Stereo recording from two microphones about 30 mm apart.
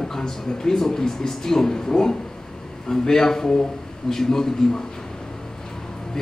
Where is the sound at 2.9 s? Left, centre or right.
Centre.